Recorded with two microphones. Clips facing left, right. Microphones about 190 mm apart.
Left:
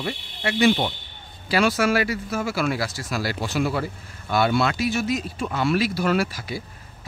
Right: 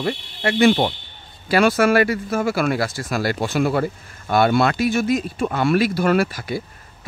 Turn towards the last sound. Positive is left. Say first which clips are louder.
# right 4 dB
turn(degrees=-55)  # may be behind; listen again after turning